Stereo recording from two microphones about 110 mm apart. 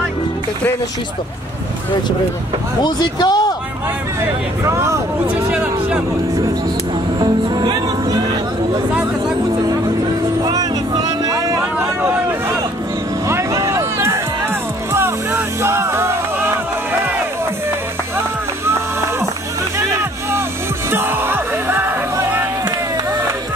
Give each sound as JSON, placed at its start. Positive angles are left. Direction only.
{"t": 2.8, "sound": "speech", "side_deg": 40}
{"t": 4.2, "sound": "speech", "side_deg": -25}
{"t": 5.5, "sound": "speech", "side_deg": -10}
{"t": 7.2, "sound": "music", "side_deg": -40}
{"t": 10.4, "sound": "a sound", "side_deg": -35}
{"t": 14.9, "sound": "music", "side_deg": -25}
{"t": 19.9, "sound": "music", "side_deg": -25}